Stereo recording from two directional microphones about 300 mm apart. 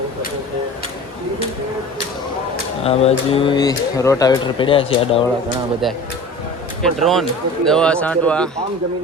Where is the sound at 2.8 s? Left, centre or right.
Centre.